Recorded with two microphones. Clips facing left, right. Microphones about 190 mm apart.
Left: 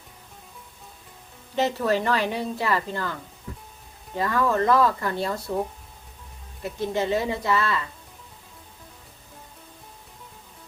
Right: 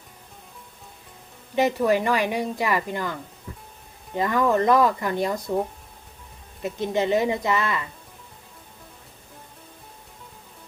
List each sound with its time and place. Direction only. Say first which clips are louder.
1.5 s speech: right 3 dB; 15° right (ahead or behind)
6.6 s speech: right 2 dB; 20° right (ahead or behind)